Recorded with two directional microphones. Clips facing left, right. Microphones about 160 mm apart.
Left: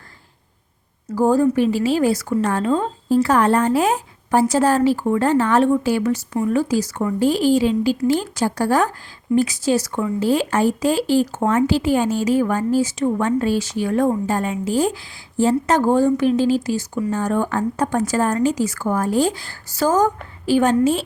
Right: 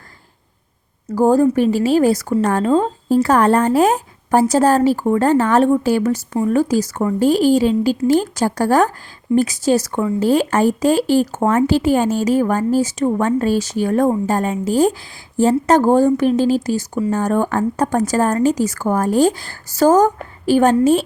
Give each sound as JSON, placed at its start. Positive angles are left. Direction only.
{"t": 1.0, "sound": "speech", "side_deg": -45}